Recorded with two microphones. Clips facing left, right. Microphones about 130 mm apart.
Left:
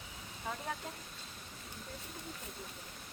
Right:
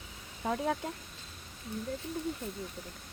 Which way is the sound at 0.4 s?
80° right.